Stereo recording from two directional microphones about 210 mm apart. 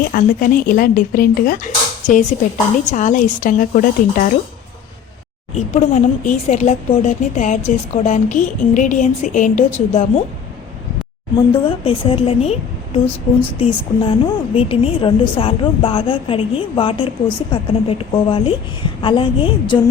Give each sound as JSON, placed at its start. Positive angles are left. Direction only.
{"t": 0.1, "sound": "speech", "side_deg": 40}
{"t": 5.5, "sound": "speech", "side_deg": 35}
{"t": 11.5, "sound": "a woman's voice", "side_deg": 25}